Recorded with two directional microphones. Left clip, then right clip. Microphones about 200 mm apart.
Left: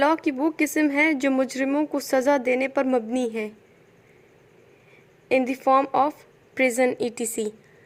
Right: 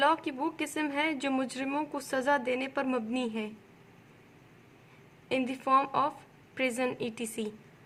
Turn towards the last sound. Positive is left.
turn(degrees=30)  # may be behind; listen again after turning